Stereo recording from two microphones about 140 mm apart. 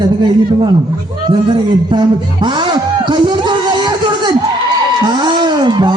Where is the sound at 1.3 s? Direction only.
35° right (ahead or behind).